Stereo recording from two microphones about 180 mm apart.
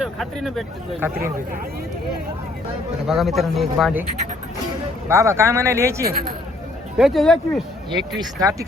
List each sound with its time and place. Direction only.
0.0 s speech: centre (ahead or behind)
0.9 s speech: 10° right (ahead or behind)
3.1 s speech: centre (ahead or behind)
5.0 s speech: 15° right (ahead or behind)
6.1 s speech: 55° right (ahead or behind)
6.9 s speech: centre (ahead or behind)
7.9 s speech: 25° right (ahead or behind)